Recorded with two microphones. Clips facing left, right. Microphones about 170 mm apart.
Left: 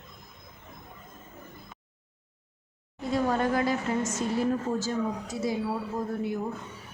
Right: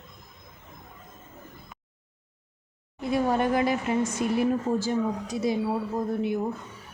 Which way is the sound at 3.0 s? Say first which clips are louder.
Right 2 dB; 10° right (ahead or behind).